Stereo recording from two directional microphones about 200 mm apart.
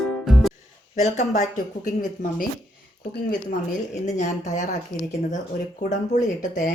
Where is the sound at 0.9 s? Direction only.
35° left (ahead or behind).